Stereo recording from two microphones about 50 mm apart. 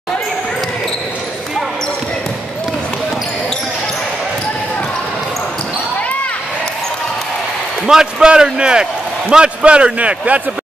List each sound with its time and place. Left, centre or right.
7.8 s a man's voice: centre; by 10.4 s right